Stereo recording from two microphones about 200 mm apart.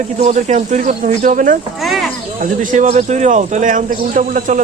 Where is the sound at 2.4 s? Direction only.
35° right (ahead or behind).